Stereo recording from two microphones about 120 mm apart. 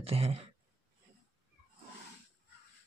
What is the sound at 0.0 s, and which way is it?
Speech, 55° right (ahead or behind).